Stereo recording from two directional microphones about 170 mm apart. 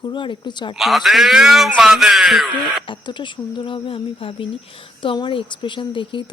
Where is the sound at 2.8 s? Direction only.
30° left (ahead or behind).